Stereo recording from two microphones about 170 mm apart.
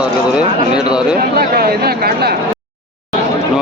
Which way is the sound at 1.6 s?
65° right (ahead or behind).